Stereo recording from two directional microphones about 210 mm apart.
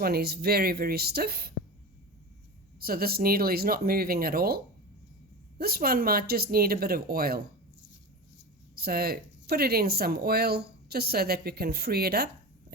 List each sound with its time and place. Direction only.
0.0 s speech: 50° right (ahead or behind)
2.8 s speech: 45° right (ahead or behind)
8.7 s speech: 50° right (ahead or behind)